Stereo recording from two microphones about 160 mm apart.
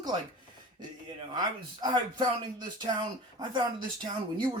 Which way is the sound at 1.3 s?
25° right (ahead or behind).